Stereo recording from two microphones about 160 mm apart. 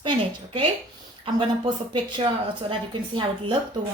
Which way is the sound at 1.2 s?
30° right (ahead or behind).